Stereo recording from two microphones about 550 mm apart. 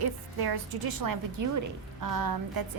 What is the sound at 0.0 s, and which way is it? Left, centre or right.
A woman's voice, right.